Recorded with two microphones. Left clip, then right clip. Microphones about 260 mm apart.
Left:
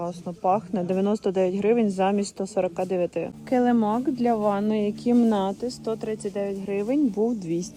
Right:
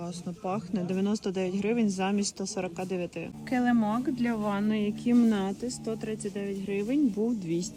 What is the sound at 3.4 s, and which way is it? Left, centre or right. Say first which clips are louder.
Speech: left 5 dB; right.